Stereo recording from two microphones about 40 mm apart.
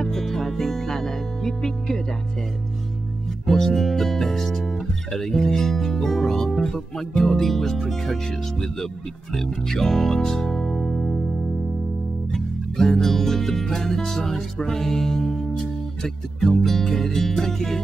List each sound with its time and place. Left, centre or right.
0.0 s music: centre
3.4 s speech: centre
12.3 s music: centre